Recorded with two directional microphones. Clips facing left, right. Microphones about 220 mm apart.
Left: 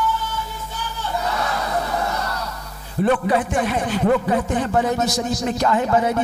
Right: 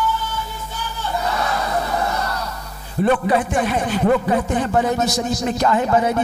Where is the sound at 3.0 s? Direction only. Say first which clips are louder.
Right 1 dB; 20° right (ahead or behind).